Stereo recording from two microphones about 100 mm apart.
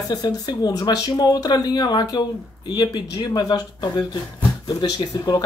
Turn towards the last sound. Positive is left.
turn(degrees=45)  # may be behind; listen again after turning